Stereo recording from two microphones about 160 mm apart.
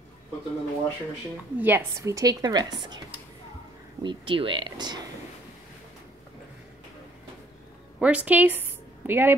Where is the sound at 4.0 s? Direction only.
30° right (ahead or behind).